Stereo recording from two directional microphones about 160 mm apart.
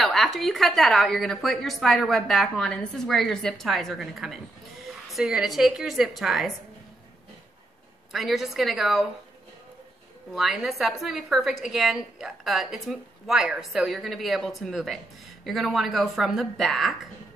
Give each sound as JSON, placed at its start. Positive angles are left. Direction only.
{"t": 0.0, "sound": "a woman's voice", "side_deg": 0}
{"t": 8.1, "sound": "a woman's voice", "side_deg": 0}
{"t": 10.3, "sound": "a woman's voice", "side_deg": 0}